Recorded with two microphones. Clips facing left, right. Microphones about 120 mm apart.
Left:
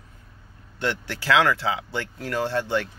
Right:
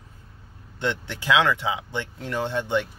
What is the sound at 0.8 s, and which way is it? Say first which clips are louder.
Speech: even; 20° right (ahead or behind).